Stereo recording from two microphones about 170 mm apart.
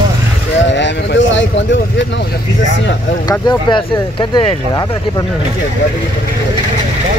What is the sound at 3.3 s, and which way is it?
Speech, 25° left (ahead or behind).